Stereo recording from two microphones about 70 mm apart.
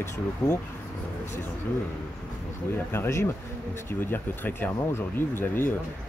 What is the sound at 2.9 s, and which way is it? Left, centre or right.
Speech, left.